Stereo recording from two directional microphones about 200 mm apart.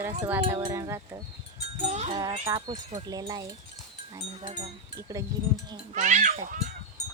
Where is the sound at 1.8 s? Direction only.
35° right (ahead or behind).